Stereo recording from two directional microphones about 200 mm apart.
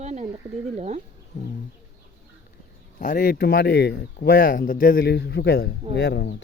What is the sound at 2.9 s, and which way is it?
Speech, 40° left (ahead or behind).